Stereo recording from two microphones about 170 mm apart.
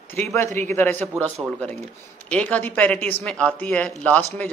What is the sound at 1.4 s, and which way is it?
Speech, 15° right (ahead or behind).